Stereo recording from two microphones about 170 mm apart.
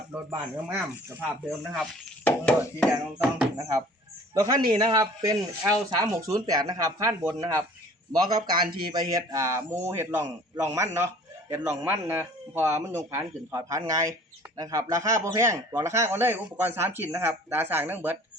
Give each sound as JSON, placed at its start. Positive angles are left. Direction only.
{"t": 0.1, "sound": "speech", "side_deg": -15}
{"t": 1.5, "sound": "speech", "side_deg": 0}
{"t": 3.6, "sound": "speech", "side_deg": -15}